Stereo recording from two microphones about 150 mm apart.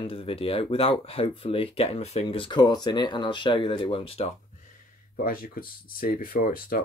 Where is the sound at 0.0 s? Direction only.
35° left (ahead or behind).